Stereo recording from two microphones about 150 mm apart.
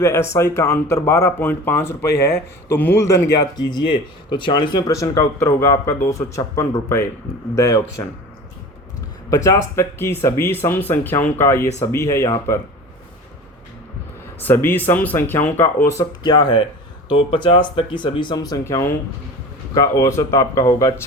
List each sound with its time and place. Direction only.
0.0 s speech: 20° left (ahead or behind)
9.3 s speech: 20° left (ahead or behind)
14.3 s speech: 15° left (ahead or behind)